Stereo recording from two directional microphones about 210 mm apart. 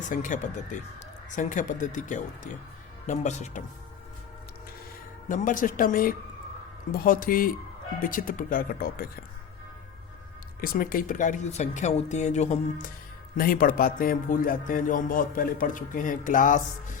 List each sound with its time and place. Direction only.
0.1 s speech: 35° left (ahead or behind)
5.3 s speech: 40° left (ahead or behind)
10.6 s speech: 40° left (ahead or behind)
13.3 s speech: 45° left (ahead or behind)